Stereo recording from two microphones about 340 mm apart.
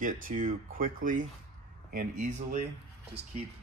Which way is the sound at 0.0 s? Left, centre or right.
Right.